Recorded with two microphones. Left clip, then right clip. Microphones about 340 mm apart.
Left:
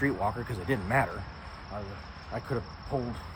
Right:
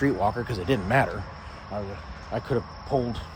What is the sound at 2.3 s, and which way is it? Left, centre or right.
Cricket, right.